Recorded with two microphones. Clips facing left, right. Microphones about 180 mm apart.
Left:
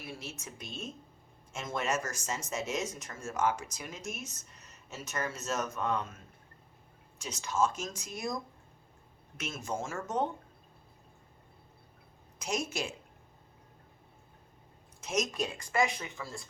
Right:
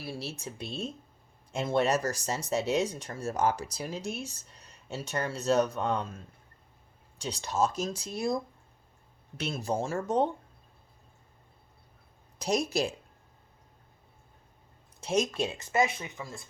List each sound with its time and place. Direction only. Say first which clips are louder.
0.0 s speech: right 6 dB; 35° right (ahead or behind)
9.4 s speech: right 6 dB; 35° right (ahead or behind)
12.4 s speech: right 6 dB; 35° right (ahead or behind)
15.0 s speech: right 4 dB; 30° right (ahead or behind)